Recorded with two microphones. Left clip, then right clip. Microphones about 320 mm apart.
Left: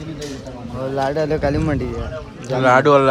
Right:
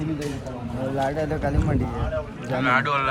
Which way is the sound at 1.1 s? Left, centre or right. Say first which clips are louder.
Left 7 dB; left.